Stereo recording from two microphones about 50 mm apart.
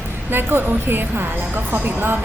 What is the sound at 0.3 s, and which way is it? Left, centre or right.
A woman's voice, right.